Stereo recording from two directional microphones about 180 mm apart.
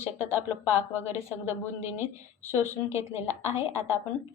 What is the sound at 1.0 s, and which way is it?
Speech, 15° right (ahead or behind).